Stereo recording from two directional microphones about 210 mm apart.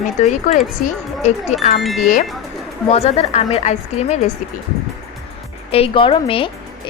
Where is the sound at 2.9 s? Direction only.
30° left (ahead or behind).